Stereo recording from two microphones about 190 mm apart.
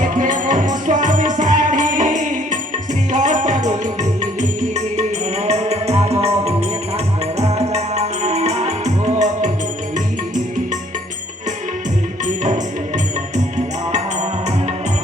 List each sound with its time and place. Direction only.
0.0 s music: 40° right (ahead or behind)
5.5 s music: 35° right (ahead or behind)